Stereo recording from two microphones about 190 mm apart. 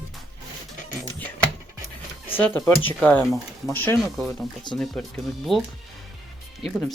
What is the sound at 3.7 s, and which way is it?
Speech, 10° left (ahead or behind).